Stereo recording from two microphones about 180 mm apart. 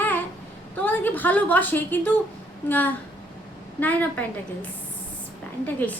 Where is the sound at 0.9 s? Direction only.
10° left (ahead or behind).